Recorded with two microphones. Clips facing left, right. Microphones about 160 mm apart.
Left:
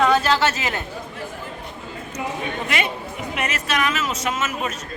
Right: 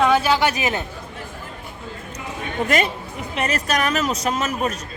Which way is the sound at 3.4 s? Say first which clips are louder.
Right 3 dB; 35° right (ahead or behind).